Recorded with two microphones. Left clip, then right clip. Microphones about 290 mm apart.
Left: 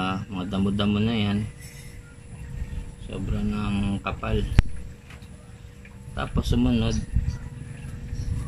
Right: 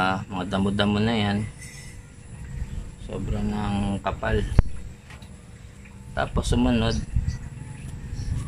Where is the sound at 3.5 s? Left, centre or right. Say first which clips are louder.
Right 2 dB; right.